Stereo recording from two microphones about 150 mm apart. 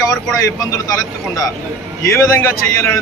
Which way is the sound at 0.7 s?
20° left (ahead or behind).